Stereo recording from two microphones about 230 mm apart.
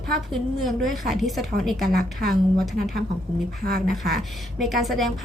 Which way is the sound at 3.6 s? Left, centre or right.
Right.